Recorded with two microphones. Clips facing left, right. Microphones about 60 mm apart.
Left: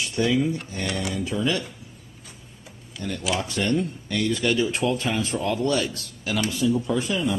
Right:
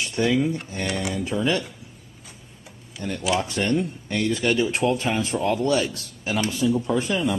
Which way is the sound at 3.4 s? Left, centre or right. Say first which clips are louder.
Right 1 dB; right.